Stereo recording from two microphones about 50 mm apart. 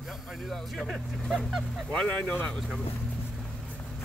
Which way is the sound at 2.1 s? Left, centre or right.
Left.